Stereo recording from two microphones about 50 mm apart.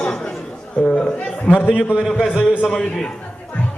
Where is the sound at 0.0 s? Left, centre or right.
Centre.